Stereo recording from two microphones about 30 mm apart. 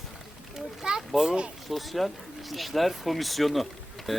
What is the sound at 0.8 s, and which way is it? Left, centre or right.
Speech, right.